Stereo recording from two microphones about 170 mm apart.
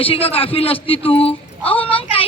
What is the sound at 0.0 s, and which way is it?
A man's voice, 35° left (ahead or behind).